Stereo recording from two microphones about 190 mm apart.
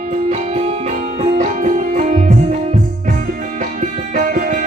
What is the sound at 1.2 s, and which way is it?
Music, 40° right (ahead or behind).